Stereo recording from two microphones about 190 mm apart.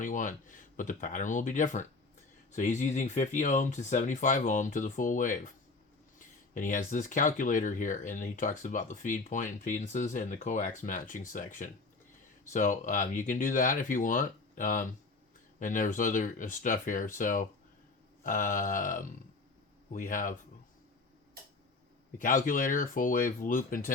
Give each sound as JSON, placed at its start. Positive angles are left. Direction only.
{"t": 0.0, "sound": "speech", "side_deg": 45}
{"t": 6.5, "sound": "speech", "side_deg": 45}
{"t": 22.2, "sound": "speech", "side_deg": 45}